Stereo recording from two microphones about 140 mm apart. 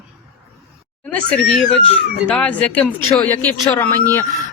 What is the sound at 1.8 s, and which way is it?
Speech, 40° left (ahead or behind).